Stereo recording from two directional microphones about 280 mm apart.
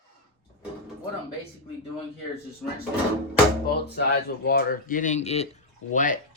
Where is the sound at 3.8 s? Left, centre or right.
Left.